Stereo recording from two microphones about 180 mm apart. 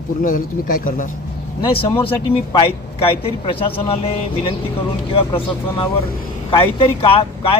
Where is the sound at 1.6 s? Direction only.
30° left (ahead or behind).